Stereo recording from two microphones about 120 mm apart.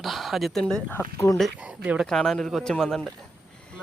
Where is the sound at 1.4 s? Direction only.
10° right (ahead or behind).